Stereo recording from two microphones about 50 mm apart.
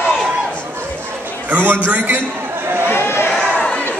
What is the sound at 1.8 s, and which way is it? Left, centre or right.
Speech, right.